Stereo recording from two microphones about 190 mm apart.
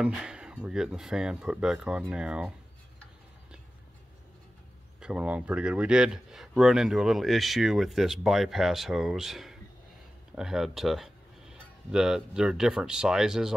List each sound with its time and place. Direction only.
0.0 s speech: 5° right (ahead or behind)
5.0 s speech: 5° right (ahead or behind)